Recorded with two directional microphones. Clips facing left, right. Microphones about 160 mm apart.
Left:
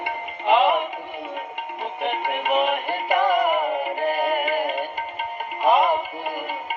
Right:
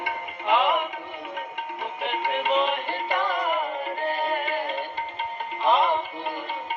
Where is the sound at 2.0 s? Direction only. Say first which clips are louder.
Left 2 dB; 15° left (ahead or behind).